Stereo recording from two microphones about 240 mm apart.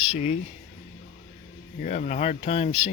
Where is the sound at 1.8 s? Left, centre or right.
Left.